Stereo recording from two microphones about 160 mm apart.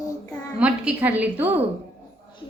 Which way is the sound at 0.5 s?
5° right (ahead or behind).